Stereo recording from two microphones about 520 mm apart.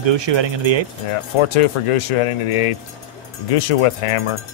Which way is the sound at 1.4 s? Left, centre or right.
Left.